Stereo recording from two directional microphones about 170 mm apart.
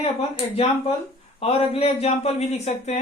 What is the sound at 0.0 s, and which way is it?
Speech, 35° left (ahead or behind).